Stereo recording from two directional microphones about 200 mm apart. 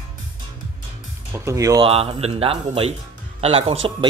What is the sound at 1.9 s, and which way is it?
A man's voice, 30° right (ahead or behind).